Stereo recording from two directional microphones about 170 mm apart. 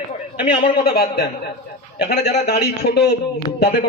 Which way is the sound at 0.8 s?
65° left (ahead or behind).